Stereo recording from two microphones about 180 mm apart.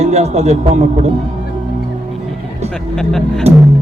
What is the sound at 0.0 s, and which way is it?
Speech, 35° right (ahead or behind).